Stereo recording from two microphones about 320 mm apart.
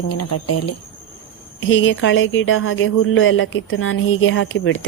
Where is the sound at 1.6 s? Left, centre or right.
Left.